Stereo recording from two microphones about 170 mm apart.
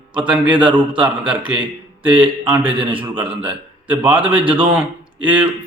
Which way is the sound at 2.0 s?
5° right (ahead or behind).